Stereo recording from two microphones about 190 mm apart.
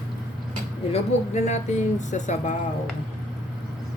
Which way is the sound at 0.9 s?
35° left (ahead or behind).